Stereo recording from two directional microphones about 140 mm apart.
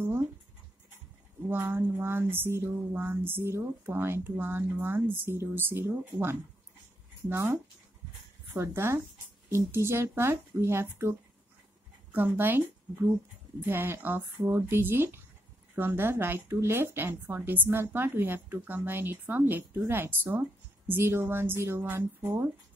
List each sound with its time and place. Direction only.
1.5 s speech: 15° right (ahead or behind)
8.5 s speech: 20° right (ahead or behind)